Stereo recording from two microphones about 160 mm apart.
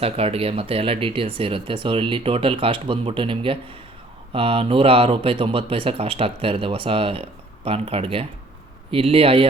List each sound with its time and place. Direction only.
0.0 s speech: 35° right (ahead or behind)